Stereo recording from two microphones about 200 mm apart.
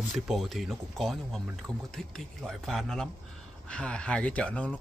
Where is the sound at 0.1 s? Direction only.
Centre (ahead or behind).